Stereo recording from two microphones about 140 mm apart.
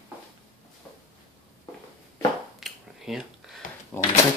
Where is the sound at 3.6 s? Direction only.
70° left (ahead or behind).